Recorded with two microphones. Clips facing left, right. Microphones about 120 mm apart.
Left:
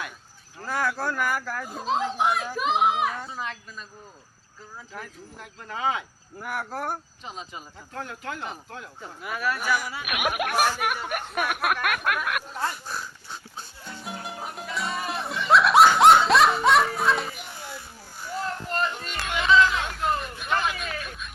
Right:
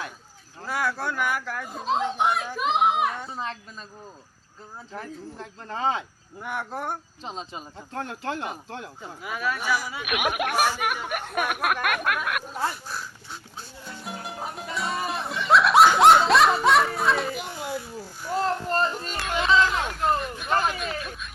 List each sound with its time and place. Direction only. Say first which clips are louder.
0.6 s a child's voice: even; centre (ahead or behind)
3.3 s speech: right 1 dB; 30° right (ahead or behind)
4.9 s speech: right 6 dB; 30° right (ahead or behind)
6.4 s speech: even; 5° left (ahead or behind)
7.3 s speech: right 3 dB; 30° right (ahead or behind)
9.2 s speech: even; centre (ahead or behind)
10.5 s speech: left 1 dB; 10° right (ahead or behind)
10.8 s speech: even; centre (ahead or behind)
11.3 s a sound: right 1 dB; centre (ahead or behind)
18.4 s a sound: right 3 dB; 35° right (ahead or behind)
19.8 s vehicle: right 2 dB; centre (ahead or behind)
20.5 s speech: right 2 dB; 40° right (ahead or behind)
20.7 s speech: right 2 dB; centre (ahead or behind)